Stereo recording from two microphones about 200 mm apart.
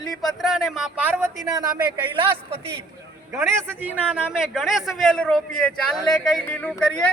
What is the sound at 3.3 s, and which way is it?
A man's voice, 15° right (ahead or behind).